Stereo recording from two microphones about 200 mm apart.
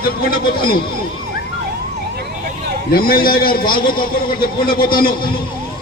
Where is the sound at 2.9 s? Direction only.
45° left (ahead or behind).